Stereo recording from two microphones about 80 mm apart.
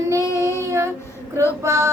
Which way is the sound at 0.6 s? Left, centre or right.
Right.